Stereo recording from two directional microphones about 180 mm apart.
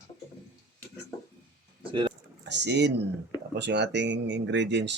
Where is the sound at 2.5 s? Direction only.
70° right (ahead or behind).